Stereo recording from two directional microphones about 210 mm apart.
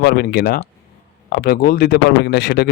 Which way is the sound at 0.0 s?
50° left (ahead or behind).